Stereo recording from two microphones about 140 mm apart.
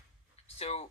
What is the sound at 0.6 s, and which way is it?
Speech, 50° left (ahead or behind).